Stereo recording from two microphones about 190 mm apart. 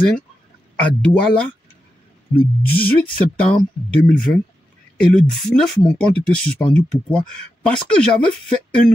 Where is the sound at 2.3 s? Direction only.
50° left (ahead or behind).